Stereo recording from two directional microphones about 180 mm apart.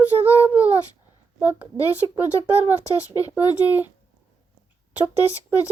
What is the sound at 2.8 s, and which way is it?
Speech, 20° left (ahead or behind).